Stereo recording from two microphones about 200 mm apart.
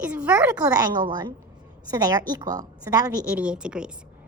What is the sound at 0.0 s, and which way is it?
A woman's voice, 5° right (ahead or behind).